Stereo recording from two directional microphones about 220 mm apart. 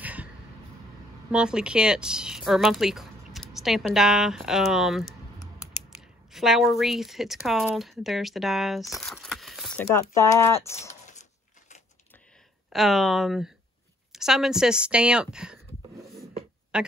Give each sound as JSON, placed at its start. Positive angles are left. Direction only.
{"t": 0.0, "sound": "a sound", "side_deg": -5}
{"t": 1.3, "sound": "speech", "side_deg": -5}
{"t": 6.3, "sound": "speech", "side_deg": 0}
{"t": 9.8, "sound": "speech", "side_deg": 10}
{"t": 12.6, "sound": "speech", "side_deg": 0}
{"t": 14.1, "sound": "a sound", "side_deg": 0}
{"t": 16.7, "sound": "speech", "side_deg": -5}